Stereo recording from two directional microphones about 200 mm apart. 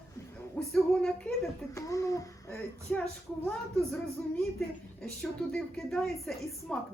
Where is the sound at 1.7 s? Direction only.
15° left (ahead or behind).